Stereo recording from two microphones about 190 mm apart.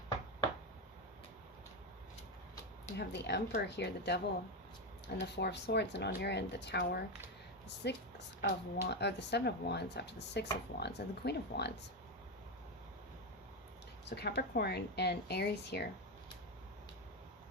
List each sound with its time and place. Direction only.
3.0 s speech: 60° left (ahead or behind)
5.2 s speech: 65° left (ahead or behind)
14.0 s speech: 60° left (ahead or behind)